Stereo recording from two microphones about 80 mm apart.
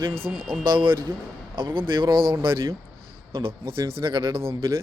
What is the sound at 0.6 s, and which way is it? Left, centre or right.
Speech, right.